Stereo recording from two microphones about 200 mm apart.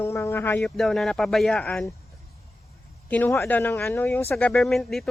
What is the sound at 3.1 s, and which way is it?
Speech, 10° left (ahead or behind).